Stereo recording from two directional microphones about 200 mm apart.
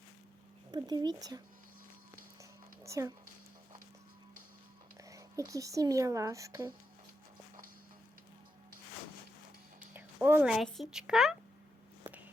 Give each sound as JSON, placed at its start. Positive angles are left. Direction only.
{"t": 0.7, "sound": "speech", "side_deg": -20}
{"t": 2.4, "sound": "a sound", "side_deg": -15}
{"t": 5.0, "sound": "speech", "side_deg": -15}
{"t": 9.9, "sound": "a woman's voice", "side_deg": -10}